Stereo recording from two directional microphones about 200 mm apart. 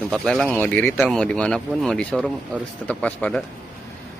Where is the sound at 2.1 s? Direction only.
5° right (ahead or behind).